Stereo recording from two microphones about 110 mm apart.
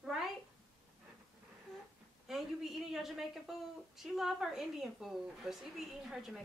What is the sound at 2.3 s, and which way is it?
A woman's voice, centre (ahead or behind).